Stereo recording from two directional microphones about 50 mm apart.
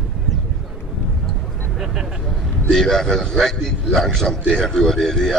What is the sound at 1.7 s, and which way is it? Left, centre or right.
Vehicle, centre.